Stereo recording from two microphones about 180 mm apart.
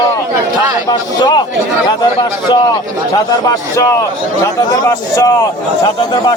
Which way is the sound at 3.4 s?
20° left (ahead or behind).